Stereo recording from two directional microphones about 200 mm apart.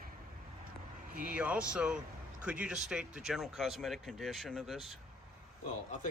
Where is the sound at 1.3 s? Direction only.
5° right (ahead or behind).